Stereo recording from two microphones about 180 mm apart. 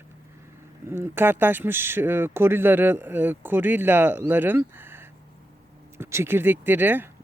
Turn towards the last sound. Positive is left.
turn(degrees=-10)  # may be behind; listen again after turning